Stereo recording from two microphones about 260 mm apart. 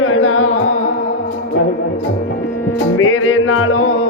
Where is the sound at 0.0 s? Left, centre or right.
Left.